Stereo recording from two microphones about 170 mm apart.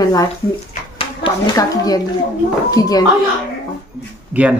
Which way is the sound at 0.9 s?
30° left (ahead or behind).